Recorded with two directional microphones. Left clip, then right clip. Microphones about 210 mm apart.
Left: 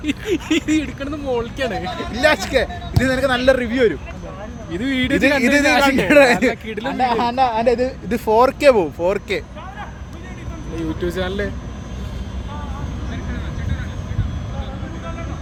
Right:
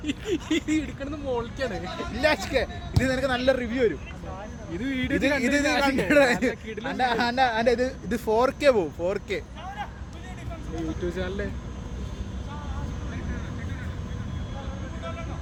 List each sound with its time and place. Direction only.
0.0 s a man's voice: 30° left (ahead or behind)
4.7 s speech: 40° left (ahead or behind)
5.4 s a man's voice: 20° left (ahead or behind)
6.5 s speech: 50° left (ahead or behind)
6.8 s speech: centre (ahead or behind)
11.0 s speech: 50° left (ahead or behind)